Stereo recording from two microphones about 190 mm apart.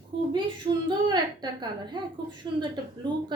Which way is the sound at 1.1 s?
25° right (ahead or behind).